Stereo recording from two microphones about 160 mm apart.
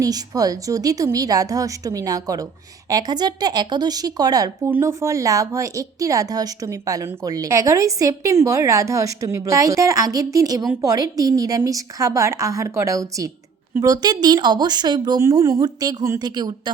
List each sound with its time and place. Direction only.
0.0 s speech: 20° right (ahead or behind)